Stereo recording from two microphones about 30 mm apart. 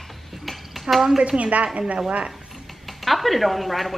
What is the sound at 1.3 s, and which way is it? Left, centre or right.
Speech, right.